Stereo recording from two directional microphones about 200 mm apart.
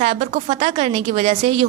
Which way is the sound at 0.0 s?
35° right (ahead or behind).